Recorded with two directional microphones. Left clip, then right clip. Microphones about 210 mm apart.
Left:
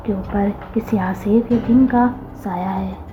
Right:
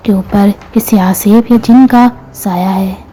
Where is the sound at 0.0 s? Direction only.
45° right (ahead or behind).